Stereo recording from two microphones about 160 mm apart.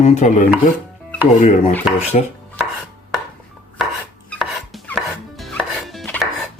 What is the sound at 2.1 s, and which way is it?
Speech, 45° left (ahead or behind).